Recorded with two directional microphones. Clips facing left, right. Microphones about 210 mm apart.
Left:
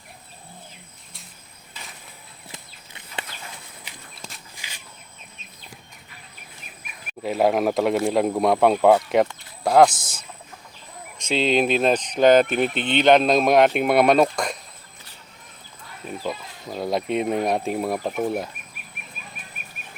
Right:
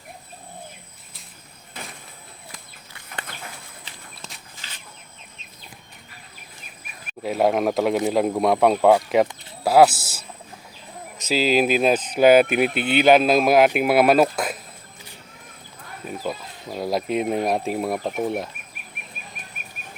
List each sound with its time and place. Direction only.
1.7 s vehicle: 55° right (ahead or behind)
2.5 s horse: 20° left (ahead or behind)
4.5 s walk: 10° left (ahead or behind)
7.2 s speech: centre (ahead or behind)
16.0 s speech: centre (ahead or behind)